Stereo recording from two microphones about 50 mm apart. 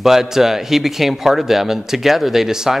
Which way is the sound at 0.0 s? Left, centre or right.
Centre.